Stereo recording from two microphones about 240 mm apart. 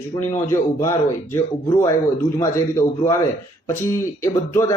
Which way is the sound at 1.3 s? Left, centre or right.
Centre.